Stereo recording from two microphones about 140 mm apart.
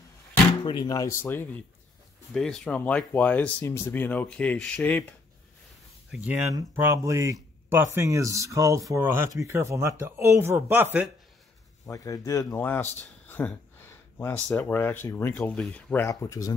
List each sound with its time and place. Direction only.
0.7 s speech: 30° left (ahead or behind); by 5.0 s 10° left (ahead or behind)
6.1 s speech: 10° right (ahead or behind)
6.5 s speech: 20° right (ahead or behind)
11.8 s speech: 25° left (ahead or behind)
14.1 s speech: 15° left (ahead or behind)
16.1 s speech: 25° left (ahead or behind)